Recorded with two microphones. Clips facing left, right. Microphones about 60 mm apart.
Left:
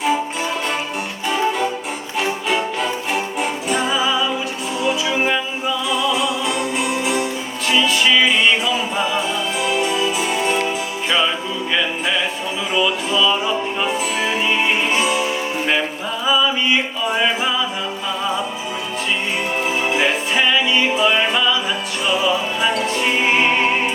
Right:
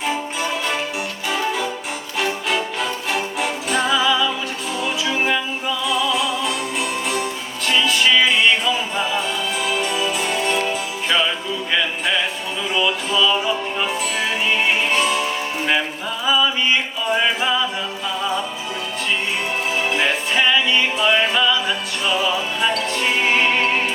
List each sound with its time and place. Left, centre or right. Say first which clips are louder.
2.1 s music: left 1 dB; centre
3.8 s music: right 3 dB; left
4.8 s music: left 3 dB; centre
19.9 s music: left 1 dB; centre